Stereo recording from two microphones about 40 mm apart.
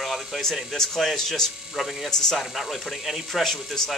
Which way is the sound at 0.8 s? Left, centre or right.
Centre.